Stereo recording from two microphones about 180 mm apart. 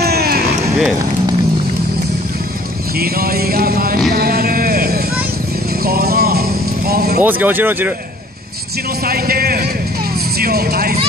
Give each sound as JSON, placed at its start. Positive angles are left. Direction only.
{"t": 0.0, "sound": "run", "side_deg": -60}
{"t": 3.0, "sound": "music", "side_deg": -55}
{"t": 6.9, "sound": "vehicle", "side_deg": -60}
{"t": 7.2, "sound": "speech", "side_deg": -10}
{"t": 9.0, "sound": "music", "side_deg": -55}
{"t": 10.4, "sound": "speech", "side_deg": -55}